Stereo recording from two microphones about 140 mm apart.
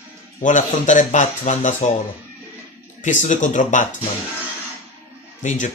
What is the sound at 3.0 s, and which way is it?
Speech, 60° left (ahead or behind).